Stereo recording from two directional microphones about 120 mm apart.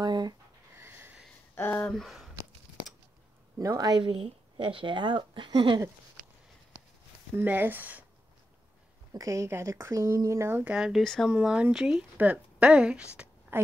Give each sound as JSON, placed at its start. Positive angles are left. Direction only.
{"t": 0.0, "sound": "a sound", "side_deg": -35}
{"t": 0.7, "sound": "snort", "side_deg": -20}
{"t": 1.5, "sound": "speech", "side_deg": 15}
{"t": 1.9, "sound": "speech", "side_deg": 0}
{"t": 3.5, "sound": "speech", "side_deg": -30}
{"t": 7.3, "sound": "speech", "side_deg": -15}
{"t": 9.1, "sound": "speech", "side_deg": -25}
{"t": 10.6, "sound": "speech", "side_deg": -5}